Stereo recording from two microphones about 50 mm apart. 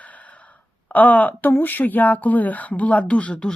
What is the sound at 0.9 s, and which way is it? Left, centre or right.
Speech, left.